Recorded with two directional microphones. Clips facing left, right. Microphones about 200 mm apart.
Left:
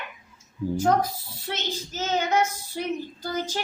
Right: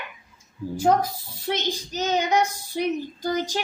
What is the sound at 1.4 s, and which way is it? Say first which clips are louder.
A woman's voice: right 5 dB; 15° right (ahead or behind).